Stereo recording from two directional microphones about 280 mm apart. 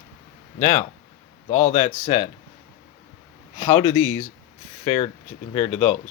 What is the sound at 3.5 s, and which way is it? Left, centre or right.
Speech, left.